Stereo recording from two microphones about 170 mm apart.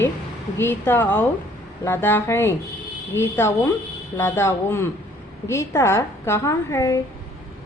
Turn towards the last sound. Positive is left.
turn(degrees=15)  # may be behind; listen again after turning